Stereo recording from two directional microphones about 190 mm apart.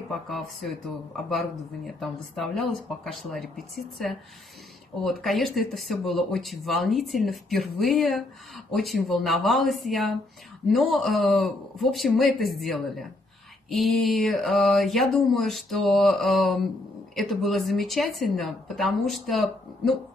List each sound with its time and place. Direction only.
0.1 s speech: centre (ahead or behind)
2.0 s speech: centre (ahead or behind)